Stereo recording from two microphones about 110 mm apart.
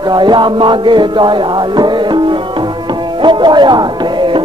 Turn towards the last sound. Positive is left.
turn(degrees=-45)  # may be behind; listen again after turning